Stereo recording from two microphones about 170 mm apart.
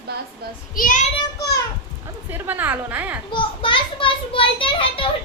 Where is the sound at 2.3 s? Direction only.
10° right (ahead or behind).